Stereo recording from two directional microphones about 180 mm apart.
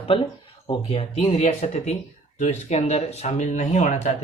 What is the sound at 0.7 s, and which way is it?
Speech, 35° left (ahead or behind).